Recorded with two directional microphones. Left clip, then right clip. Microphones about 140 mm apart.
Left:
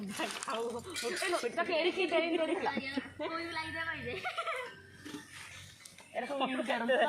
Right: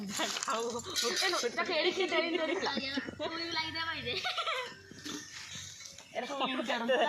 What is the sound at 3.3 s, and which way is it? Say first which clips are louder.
Speech: right 2 dB; 25° left (ahead or behind).